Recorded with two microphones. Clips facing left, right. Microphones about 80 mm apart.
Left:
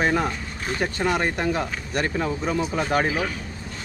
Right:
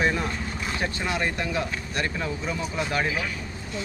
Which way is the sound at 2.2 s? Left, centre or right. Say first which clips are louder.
Left 5 dB; left.